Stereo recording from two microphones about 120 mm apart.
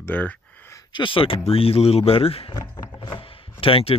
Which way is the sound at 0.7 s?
40° left (ahead or behind).